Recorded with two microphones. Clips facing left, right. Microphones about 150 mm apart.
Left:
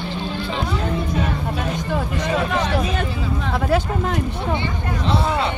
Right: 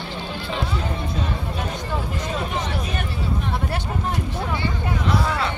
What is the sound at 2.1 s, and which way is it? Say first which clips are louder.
Speech: left 5 dB; 85° left.